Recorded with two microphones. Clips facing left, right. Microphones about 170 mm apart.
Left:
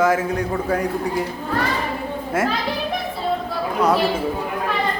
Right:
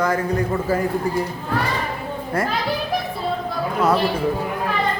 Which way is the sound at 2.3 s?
Centre (ahead or behind).